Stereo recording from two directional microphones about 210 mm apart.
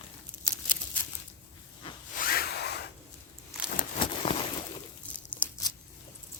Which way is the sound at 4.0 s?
25° left (ahead or behind).